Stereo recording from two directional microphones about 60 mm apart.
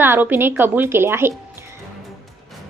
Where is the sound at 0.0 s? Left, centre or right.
Right.